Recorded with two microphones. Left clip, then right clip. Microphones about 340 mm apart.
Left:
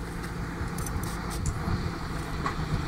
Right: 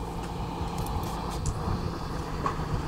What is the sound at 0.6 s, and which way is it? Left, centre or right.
Vehicle, centre.